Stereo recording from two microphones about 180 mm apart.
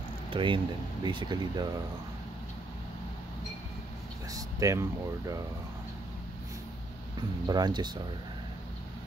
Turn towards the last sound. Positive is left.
turn(degrees=-25)  # may be behind; listen again after turning